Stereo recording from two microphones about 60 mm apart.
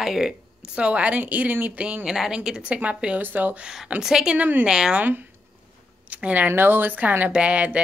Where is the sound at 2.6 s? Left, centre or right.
Right.